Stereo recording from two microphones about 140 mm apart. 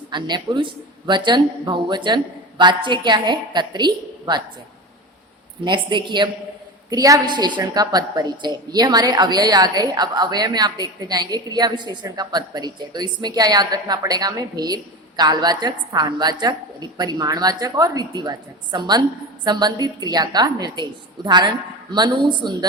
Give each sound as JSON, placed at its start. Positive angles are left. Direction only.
{"t": 0.1, "sound": "a woman's voice", "side_deg": -35}
{"t": 5.6, "sound": "a woman's voice", "side_deg": -35}